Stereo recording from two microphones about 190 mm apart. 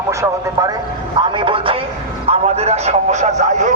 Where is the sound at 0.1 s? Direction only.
15° right (ahead or behind).